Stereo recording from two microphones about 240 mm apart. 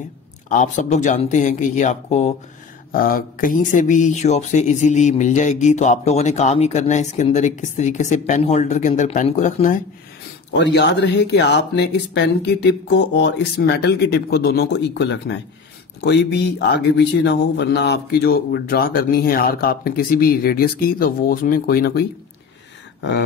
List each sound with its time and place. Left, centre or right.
0.5 s speech: left
10.5 s speech: left